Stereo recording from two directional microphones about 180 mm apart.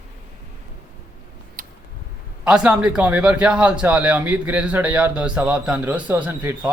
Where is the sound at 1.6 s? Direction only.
50° right (ahead or behind).